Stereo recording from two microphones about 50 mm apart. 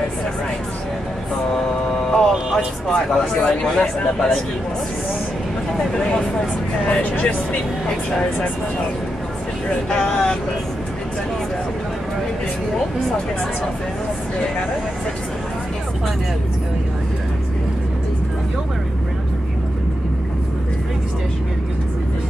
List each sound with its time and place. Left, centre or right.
1.5 s a sound: centre
4.0 s speech: left
5.9 s speech: centre
6.9 s speech: left
9.8 s speech: centre